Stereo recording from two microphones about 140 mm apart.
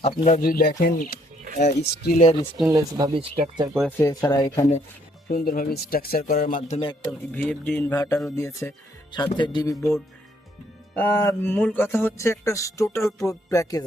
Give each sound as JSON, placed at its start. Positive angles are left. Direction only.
{"t": 0.3, "sound": "speech", "side_deg": 80}
{"t": 1.5, "sound": "speech", "side_deg": 55}
{"t": 2.0, "sound": "speech", "side_deg": 70}
{"t": 2.6, "sound": "speech", "side_deg": -25}
{"t": 3.1, "sound": "speech", "side_deg": -40}
{"t": 3.8, "sound": "speech", "side_deg": 15}
{"t": 5.3, "sound": "speech", "side_deg": 90}
{"t": 6.7, "sound": "a man's voice", "side_deg": 45}
{"t": 7.3, "sound": "speech", "side_deg": 10}
{"t": 9.1, "sound": "speech", "side_deg": 35}
{"t": 10.9, "sound": "speech", "side_deg": 15}